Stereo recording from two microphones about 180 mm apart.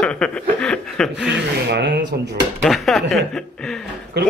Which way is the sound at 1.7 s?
70° right (ahead or behind).